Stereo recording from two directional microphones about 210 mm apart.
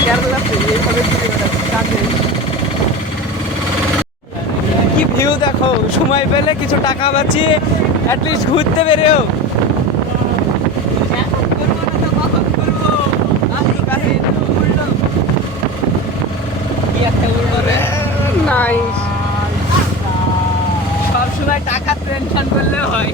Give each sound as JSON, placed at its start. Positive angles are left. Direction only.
{"t": 5.1, "sound": "speech", "side_deg": 20}
{"t": 6.8, "sound": "speech", "side_deg": 25}
{"t": 8.8, "sound": "speech", "side_deg": 30}
{"t": 18.4, "sound": "a sound", "side_deg": 5}